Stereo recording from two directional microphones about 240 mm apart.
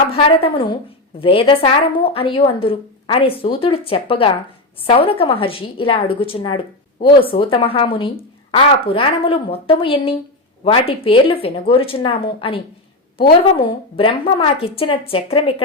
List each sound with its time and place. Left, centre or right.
0.1 s speech: left